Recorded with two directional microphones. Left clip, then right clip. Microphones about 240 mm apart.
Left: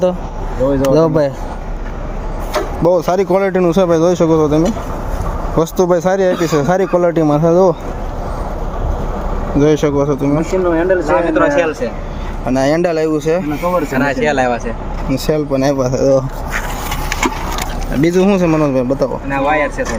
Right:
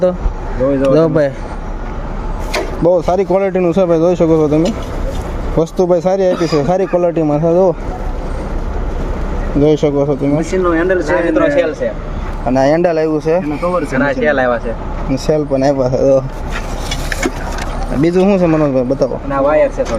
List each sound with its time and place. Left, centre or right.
0.7 s speech: centre
2.8 s speech: centre
9.6 s speech: centre
10.7 s speech: centre
11.1 s speech: centre
12.5 s speech: centre
13.9 s speech: left
15.1 s speech: centre
18.0 s speech: centre
19.3 s speech: left